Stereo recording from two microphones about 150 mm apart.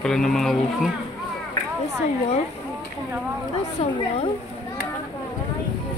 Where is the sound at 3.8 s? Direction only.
40° left (ahead or behind).